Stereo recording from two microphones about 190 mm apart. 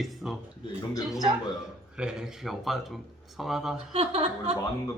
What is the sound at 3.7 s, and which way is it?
Speech, 35° right (ahead or behind).